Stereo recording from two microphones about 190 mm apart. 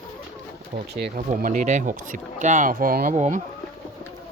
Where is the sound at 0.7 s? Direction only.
60° right (ahead or behind).